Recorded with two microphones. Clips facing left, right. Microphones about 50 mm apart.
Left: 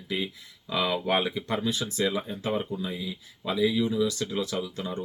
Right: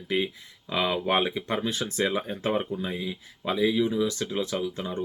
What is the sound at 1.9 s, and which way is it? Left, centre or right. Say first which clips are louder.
Speech: right 1 dB; right.